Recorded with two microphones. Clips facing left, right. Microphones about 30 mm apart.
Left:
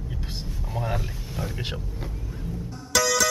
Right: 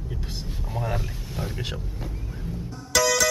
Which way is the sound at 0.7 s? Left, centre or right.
Centre.